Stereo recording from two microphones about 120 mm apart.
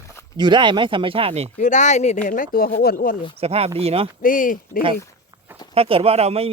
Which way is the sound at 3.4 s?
55° right (ahead or behind).